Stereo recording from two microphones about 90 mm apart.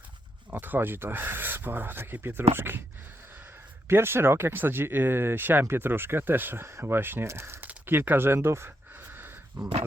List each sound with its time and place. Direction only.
0.5 s speech: 20° right (ahead or behind)